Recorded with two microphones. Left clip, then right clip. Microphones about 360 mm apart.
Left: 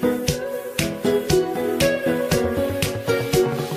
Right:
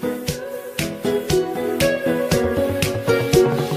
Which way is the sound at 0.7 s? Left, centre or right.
Centre.